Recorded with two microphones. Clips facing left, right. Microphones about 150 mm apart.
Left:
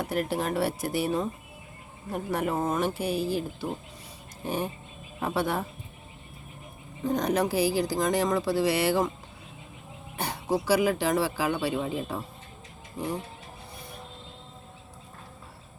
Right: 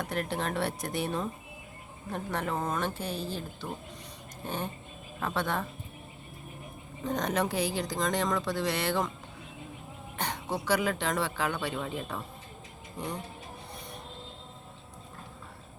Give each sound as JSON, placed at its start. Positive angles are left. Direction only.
{"t": 0.0, "sound": "speech", "side_deg": 5}
{"t": 7.0, "sound": "speech", "side_deg": 0}
{"t": 10.2, "sound": "speech", "side_deg": 10}